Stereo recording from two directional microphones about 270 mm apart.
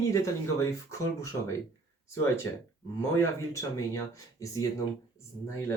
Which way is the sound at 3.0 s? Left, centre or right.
Centre.